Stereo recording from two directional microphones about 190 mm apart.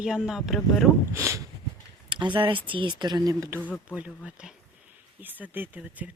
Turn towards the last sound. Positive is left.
turn(degrees=-10)  # may be behind; listen again after turning